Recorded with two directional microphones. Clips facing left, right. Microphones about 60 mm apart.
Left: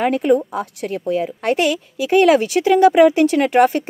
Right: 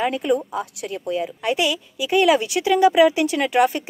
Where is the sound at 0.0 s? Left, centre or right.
Left.